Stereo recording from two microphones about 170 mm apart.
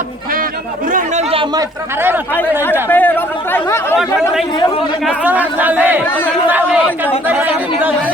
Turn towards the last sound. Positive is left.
turn(degrees=-10)  # may be behind; listen again after turning